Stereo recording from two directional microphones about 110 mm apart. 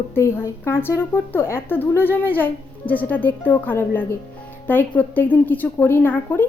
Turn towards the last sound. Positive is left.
turn(degrees=15)  # may be behind; listen again after turning